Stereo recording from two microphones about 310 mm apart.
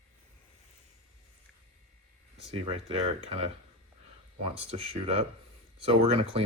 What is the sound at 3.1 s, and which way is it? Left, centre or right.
Speech, centre.